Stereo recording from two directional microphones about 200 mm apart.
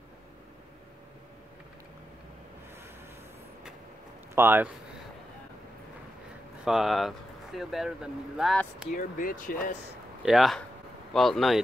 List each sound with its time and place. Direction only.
4.4 s speech: 10° right (ahead or behind)
6.6 s speech: centre (ahead or behind)
8.9 s speech: 45° left (ahead or behind)
10.2 s speech: centre (ahead or behind)